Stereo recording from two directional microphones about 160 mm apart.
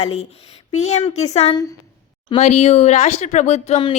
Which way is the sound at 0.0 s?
40° left (ahead or behind).